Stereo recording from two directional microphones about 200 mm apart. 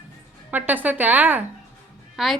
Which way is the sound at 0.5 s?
10° right (ahead or behind).